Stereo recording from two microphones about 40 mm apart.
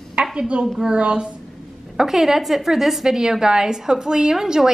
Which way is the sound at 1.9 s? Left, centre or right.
Centre.